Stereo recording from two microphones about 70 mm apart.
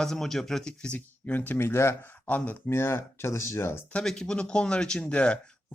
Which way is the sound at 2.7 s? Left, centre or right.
Left.